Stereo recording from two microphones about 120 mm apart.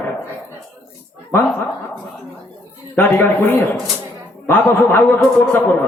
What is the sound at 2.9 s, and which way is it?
A man's voice, 15° left (ahead or behind).